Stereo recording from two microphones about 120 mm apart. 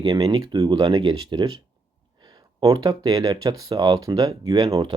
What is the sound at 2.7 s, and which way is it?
Speech, 35° right (ahead or behind).